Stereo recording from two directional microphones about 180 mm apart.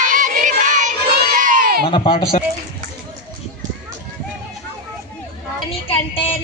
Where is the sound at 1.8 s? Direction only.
25° left (ahead or behind).